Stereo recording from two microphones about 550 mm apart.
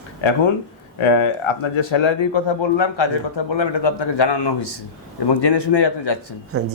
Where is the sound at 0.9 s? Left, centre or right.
Left.